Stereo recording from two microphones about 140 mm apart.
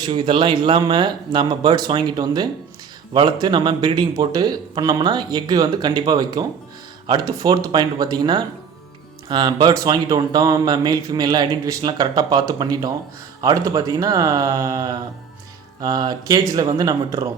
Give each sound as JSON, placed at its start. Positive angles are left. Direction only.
{"t": 0.0, "sound": "speech", "side_deg": -35}